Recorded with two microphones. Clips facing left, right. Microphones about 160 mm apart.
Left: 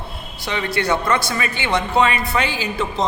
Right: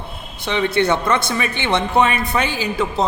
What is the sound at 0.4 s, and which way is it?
A man's voice, 20° right (ahead or behind).